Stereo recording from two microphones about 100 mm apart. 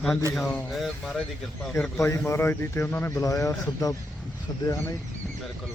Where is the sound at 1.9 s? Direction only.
25° left (ahead or behind).